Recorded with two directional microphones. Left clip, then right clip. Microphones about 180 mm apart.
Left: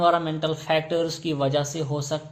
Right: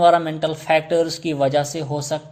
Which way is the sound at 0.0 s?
35° right (ahead or behind).